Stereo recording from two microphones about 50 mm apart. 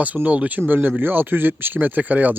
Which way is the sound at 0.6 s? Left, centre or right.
Right.